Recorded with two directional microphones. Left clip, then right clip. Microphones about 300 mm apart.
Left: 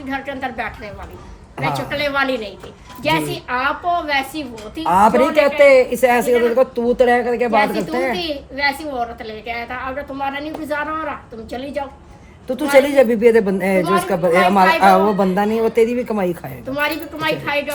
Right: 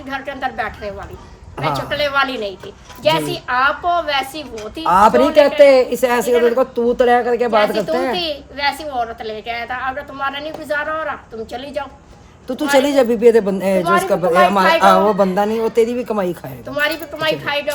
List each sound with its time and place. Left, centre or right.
0.1 s speech: centre
12.5 s speech: centre